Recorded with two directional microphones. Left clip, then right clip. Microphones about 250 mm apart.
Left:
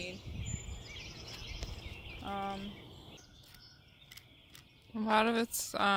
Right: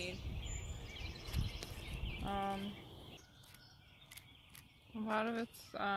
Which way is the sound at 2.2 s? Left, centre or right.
Centre.